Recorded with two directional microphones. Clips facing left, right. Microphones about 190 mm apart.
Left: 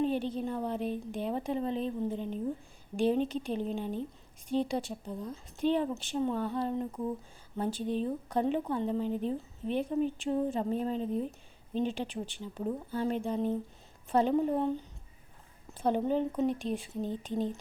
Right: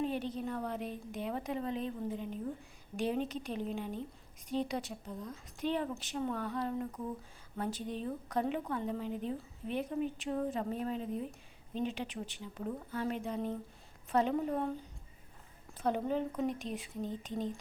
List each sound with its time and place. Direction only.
0.0 s a woman's voice: 30° left (ahead or behind)
15.8 s speech: 30° left (ahead or behind)